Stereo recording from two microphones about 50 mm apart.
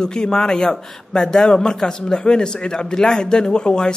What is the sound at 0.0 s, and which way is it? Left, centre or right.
A man's voice, centre.